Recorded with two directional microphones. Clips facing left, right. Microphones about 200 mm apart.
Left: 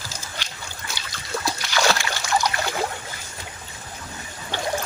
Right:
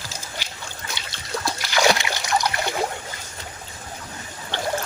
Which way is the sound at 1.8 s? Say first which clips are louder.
Right 3 dB; 15° right (ahead or behind).